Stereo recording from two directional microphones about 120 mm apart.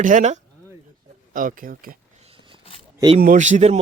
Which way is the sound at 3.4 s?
85° right.